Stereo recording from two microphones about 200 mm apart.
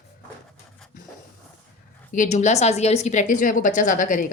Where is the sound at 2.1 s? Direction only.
35° left (ahead or behind).